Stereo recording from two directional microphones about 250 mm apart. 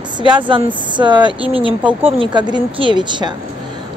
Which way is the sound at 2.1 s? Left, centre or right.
Centre.